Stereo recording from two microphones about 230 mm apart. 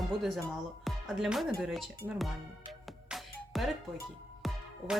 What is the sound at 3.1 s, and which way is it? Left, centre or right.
Music, centre.